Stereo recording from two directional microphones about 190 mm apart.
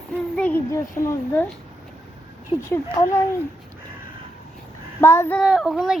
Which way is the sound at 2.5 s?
20° left (ahead or behind).